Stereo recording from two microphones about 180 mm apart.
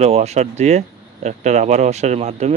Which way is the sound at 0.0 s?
35° right (ahead or behind).